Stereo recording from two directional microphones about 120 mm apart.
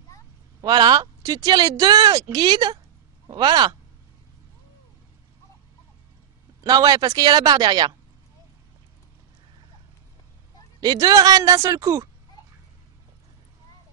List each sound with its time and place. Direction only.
0.6 s speech: 35° right (ahead or behind)
6.6 s speech: 35° right (ahead or behind)
10.8 s speech: 30° right (ahead or behind)